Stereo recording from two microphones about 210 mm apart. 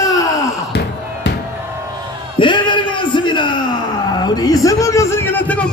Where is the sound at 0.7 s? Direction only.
55° left (ahead or behind).